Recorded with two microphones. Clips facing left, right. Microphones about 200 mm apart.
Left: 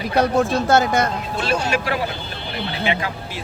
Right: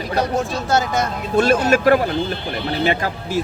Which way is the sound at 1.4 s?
45° right (ahead or behind).